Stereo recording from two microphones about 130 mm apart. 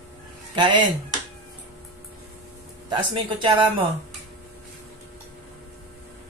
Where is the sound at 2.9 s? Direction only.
35° right (ahead or behind).